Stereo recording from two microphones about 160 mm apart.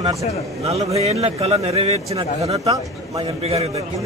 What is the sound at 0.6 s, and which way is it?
A man's voice, 40° right (ahead or behind).